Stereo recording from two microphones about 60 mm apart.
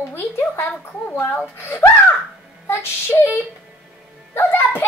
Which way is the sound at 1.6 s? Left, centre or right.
Left.